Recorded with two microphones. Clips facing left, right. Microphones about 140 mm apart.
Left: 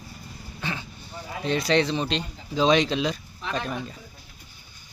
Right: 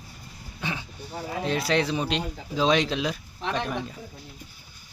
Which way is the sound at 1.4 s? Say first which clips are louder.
Left 3 dB; 5° right (ahead or behind).